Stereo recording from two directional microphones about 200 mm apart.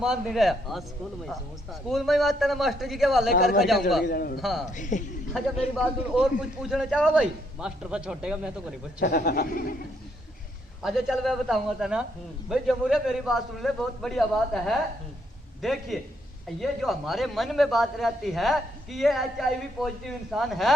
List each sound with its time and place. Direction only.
0.0 s a man's voice: centre (ahead or behind)
1.9 s a man's voice: centre (ahead or behind)
4.0 s speech: 45° left (ahead or behind)
4.4 s a man's voice: centre (ahead or behind)
4.7 s a man's voice: 40° left (ahead or behind)
5.7 s a man's voice: centre (ahead or behind)
9.0 s speech: 50° left (ahead or behind)
10.8 s a man's voice: centre (ahead or behind)